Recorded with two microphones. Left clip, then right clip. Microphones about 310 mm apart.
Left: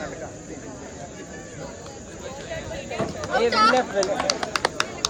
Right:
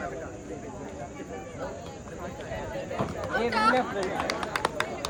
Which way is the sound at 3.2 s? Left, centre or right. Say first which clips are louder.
Left 6 dB; centre.